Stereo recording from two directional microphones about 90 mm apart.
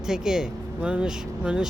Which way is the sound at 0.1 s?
5° right (ahead or behind).